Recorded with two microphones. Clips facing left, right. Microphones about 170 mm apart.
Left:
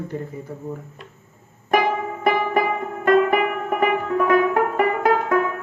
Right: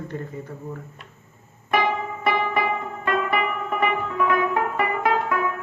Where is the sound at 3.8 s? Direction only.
45° left (ahead or behind).